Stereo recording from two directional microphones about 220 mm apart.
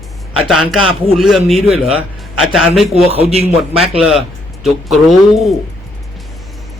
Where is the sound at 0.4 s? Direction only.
Centre (ahead or behind).